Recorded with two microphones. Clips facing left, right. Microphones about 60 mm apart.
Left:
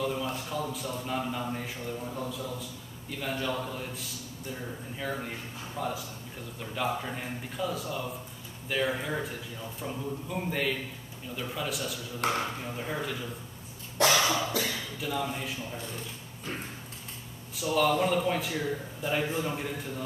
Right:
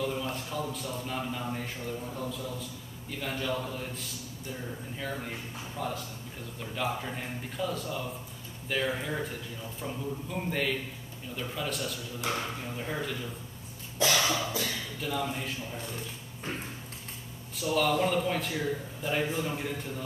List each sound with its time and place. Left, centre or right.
0.0 s a man's voice: centre
12.2 s speech: left
12.6 s a man's voice: centre
14.2 s cough: left
14.6 s a man's voice: centre
17.6 s a man's voice: centre